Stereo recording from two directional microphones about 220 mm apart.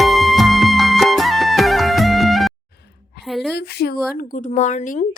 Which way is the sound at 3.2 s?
Centre (ahead or behind).